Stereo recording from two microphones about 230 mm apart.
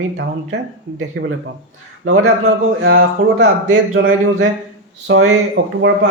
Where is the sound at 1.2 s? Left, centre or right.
Right.